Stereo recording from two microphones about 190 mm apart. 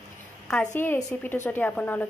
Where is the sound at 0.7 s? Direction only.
15° left (ahead or behind).